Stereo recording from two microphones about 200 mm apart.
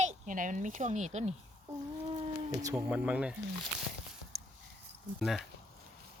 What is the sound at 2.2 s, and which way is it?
Speech, 15° right (ahead or behind).